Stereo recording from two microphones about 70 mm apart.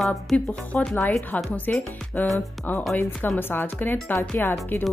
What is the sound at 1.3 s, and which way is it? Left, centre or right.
Speech, centre.